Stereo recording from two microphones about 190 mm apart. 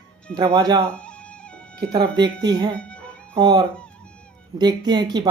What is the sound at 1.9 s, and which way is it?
Speech, 25° right (ahead or behind).